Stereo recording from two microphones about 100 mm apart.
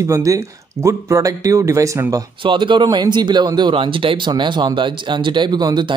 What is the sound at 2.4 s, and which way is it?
Speech, 55° right (ahead or behind).